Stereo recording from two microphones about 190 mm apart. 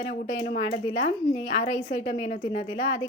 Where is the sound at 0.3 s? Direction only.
35° left (ahead or behind).